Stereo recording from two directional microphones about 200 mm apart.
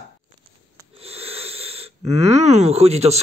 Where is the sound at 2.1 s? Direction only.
30° right (ahead or behind).